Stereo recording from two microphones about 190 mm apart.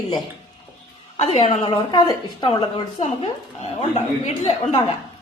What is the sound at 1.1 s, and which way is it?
Speech, 30° left (ahead or behind).